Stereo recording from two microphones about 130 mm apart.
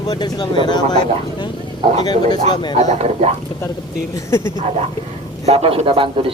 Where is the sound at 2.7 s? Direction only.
60° right (ahead or behind).